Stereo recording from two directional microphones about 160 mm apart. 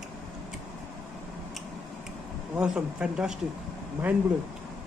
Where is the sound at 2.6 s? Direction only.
5° right (ahead or behind).